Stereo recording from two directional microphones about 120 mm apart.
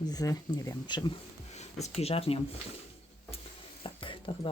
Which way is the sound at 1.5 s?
70° left (ahead or behind).